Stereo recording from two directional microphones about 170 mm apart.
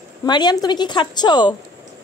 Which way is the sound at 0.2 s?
25° left (ahead or behind).